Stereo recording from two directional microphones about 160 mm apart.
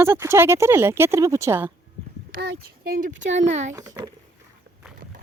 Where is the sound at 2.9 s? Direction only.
55° right (ahead or behind).